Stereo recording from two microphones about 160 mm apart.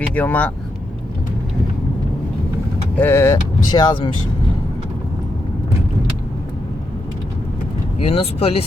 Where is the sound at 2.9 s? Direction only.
15° left (ahead or behind).